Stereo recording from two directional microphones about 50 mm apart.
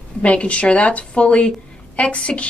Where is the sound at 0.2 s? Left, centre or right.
Left.